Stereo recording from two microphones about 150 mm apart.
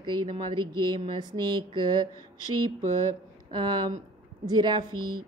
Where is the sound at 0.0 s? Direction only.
30° right (ahead or behind).